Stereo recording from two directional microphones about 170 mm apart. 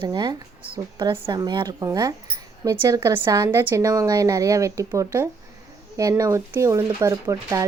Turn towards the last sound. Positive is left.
turn(degrees=-20)  # may be behind; listen again after turning